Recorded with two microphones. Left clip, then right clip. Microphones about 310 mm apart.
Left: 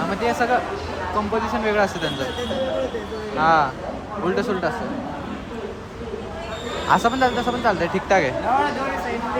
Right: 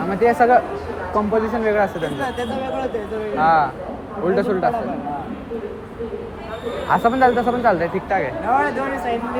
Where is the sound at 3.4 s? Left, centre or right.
Centre.